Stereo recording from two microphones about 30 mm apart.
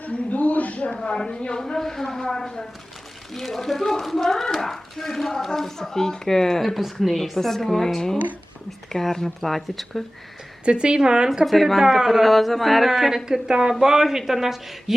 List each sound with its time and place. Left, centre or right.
0.0 s a sound: left
1.0 s a woman's voice: left
1.8 s speech: centre
3.3 s speech: centre
10.7 s speech: right
11.4 s speech: centre
11.8 s speech: centre
12.2 s speech: centre
13.2 s speech: right; by 14.9 s centre